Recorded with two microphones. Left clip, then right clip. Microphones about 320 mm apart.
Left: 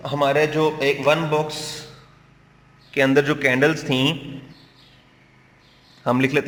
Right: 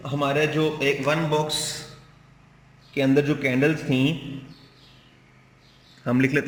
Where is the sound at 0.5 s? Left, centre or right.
Centre.